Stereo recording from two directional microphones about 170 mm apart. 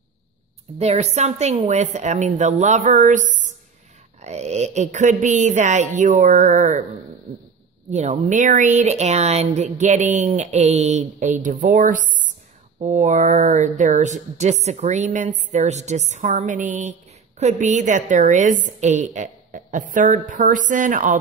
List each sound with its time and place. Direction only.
0.7 s speech: 40° right (ahead or behind)
7.9 s speech: 45° right (ahead or behind)